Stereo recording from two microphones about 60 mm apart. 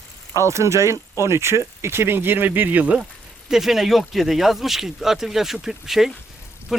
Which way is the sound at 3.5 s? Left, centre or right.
Centre.